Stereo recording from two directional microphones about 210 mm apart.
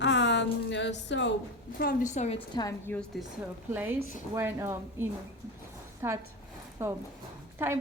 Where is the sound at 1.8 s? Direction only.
40° left (ahead or behind).